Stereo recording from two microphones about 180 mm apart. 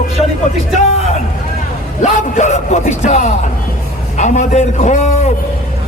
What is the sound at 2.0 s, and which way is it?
A man's voice, 40° left (ahead or behind).